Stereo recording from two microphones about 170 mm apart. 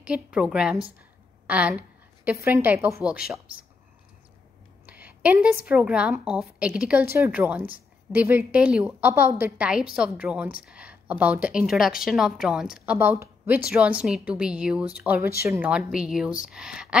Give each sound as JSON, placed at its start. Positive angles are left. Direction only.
{"t": 0.0, "sound": "a woman's voice", "side_deg": -5}
{"t": 4.8, "sound": "a woman's voice", "side_deg": -10}
{"t": 15.7, "sound": "speech", "side_deg": -5}